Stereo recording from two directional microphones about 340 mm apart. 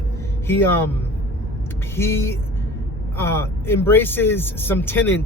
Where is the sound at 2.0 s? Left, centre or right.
Centre.